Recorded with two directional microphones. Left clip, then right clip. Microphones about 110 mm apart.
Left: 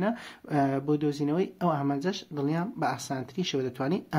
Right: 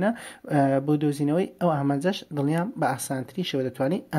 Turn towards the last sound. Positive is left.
turn(degrees=-30)  # may be behind; listen again after turning